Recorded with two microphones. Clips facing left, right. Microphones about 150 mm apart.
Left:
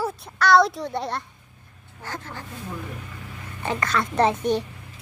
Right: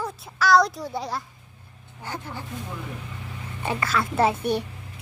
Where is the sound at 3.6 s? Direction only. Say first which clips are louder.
Left 1 dB; 5° right (ahead or behind).